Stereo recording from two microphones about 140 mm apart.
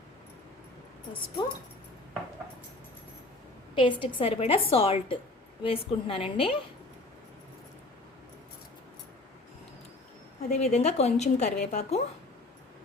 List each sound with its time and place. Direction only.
3.8 s a woman's voice: 35° left (ahead or behind)
10.5 s a woman's voice: 50° left (ahead or behind)